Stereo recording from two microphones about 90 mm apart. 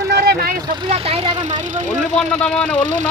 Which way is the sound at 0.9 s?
90° right.